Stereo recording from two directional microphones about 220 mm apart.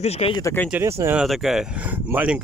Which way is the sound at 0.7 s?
10° right (ahead or behind).